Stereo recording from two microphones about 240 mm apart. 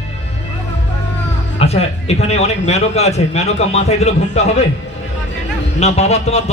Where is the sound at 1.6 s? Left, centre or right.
Left.